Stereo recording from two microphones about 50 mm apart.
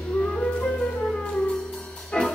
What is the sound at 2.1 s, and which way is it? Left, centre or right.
Music, left.